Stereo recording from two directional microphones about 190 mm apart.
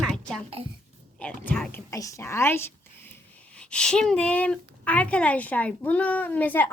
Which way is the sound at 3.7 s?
5° left (ahead or behind).